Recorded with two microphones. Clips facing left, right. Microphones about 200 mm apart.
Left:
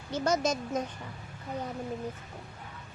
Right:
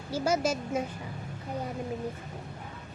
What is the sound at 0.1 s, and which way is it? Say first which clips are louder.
Speech: right 1 dB; 10° right (ahead or behind).